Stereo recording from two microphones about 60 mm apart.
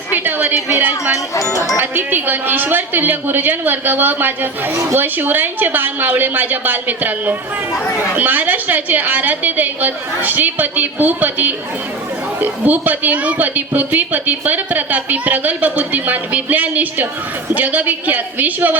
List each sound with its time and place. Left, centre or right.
0.1 s a sound: right
0.8 s a woman's voice: right
1.1 s speech: left
1.8 s a woman's voice: right